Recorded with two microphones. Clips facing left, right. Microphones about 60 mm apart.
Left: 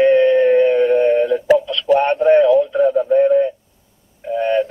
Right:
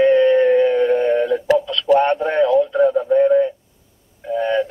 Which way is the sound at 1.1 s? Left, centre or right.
Right.